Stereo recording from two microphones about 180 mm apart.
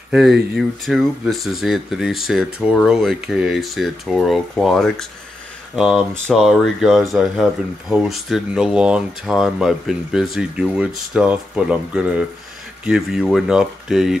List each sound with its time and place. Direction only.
0.1 s speech: centre (ahead or behind)